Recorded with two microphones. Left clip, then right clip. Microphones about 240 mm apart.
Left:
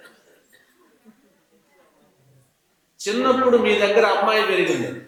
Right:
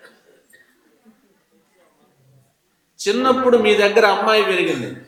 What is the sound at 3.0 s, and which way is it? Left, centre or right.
A man's voice, centre.